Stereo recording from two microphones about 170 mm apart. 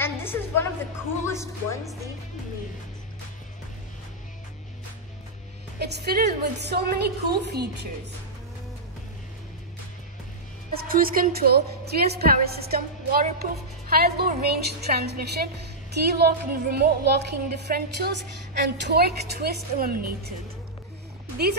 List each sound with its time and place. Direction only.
0.0 s a sound: 15° left (ahead or behind)
1.2 s speech: 15° left (ahead or behind)
5.8 s a woman's voice: 75° right (ahead or behind)
10.7 s a woman's voice: 60° right (ahead or behind)